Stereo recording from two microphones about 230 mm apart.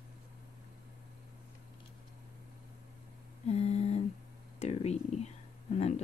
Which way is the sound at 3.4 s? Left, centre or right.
Left.